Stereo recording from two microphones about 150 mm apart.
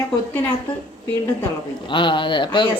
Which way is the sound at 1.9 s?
30° left (ahead or behind).